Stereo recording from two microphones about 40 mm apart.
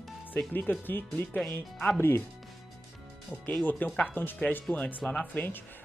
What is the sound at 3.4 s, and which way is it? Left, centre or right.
Speech, left.